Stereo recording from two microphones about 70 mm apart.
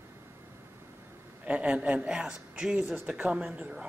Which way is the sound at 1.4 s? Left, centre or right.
Centre.